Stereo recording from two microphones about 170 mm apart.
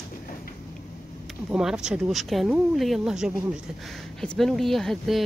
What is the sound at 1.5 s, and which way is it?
Speech, 5° right (ahead or behind).